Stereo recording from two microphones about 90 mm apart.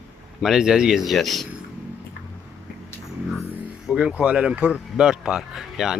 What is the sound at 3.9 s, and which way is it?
Speech, 10° right (ahead or behind).